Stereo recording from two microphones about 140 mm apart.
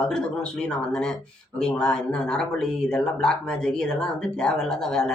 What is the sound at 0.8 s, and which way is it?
Speech, 5° left (ahead or behind).